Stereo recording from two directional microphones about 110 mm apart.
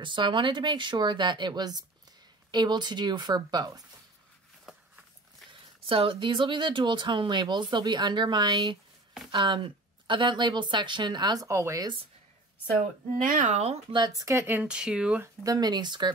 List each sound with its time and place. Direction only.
0.0 s speech: 45° right (ahead or behind)
5.5 s speech: 55° right (ahead or behind)
11.4 s speech: 25° right (ahead or behind)
13.5 s speech: 80° right
13.9 s speech: 35° right (ahead or behind); by 15.2 s 10° right (ahead or behind)
15.4 s speech: 35° right (ahead or behind)